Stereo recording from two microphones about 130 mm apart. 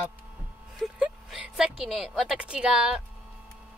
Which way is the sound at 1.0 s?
5° right (ahead or behind).